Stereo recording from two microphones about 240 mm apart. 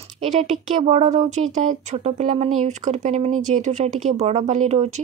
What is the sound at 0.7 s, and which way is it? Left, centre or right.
Speech, right.